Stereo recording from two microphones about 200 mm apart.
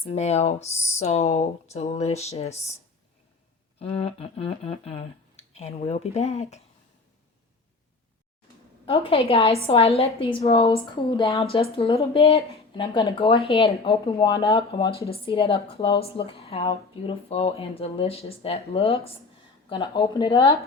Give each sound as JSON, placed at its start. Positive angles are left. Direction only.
{"t": 0.0, "sound": "speech", "side_deg": 30}
{"t": 3.8, "sound": "speech", "side_deg": 30}
{"t": 8.9, "sound": "speech", "side_deg": 30}
{"t": 11.2, "sound": "a woman's voice", "side_deg": 15}
{"t": 11.5, "sound": "speech", "side_deg": 30}